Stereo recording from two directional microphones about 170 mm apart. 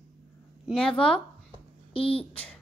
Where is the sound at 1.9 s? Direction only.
35° left (ahead or behind).